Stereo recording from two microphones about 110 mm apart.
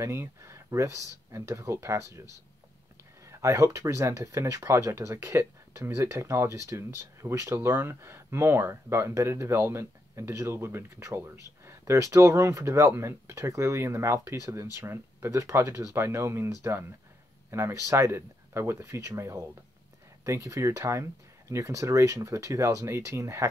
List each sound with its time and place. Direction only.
0.0 s speech: 25° right (ahead or behind)
3.3 s speech: 25° right (ahead or behind)